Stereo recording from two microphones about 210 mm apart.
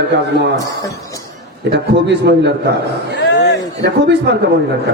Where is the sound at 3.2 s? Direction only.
55° left (ahead or behind).